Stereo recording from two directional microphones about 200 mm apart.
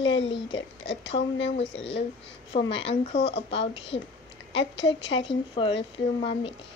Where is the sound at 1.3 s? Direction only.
65° left (ahead or behind).